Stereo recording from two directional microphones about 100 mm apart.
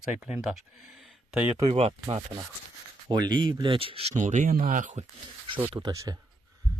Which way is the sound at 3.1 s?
50° right (ahead or behind).